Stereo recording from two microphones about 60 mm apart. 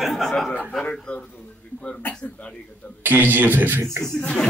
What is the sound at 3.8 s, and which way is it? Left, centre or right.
Speech, right.